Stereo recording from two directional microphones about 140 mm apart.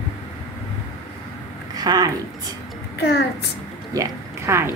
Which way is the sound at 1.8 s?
25° right (ahead or behind).